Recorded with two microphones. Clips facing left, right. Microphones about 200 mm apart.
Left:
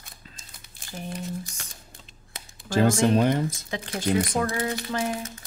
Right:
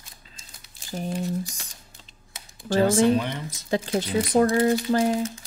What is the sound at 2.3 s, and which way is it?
Speech, 45° left (ahead or behind).